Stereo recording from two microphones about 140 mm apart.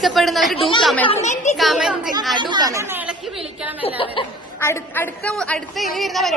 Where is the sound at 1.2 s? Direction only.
55° left (ahead or behind).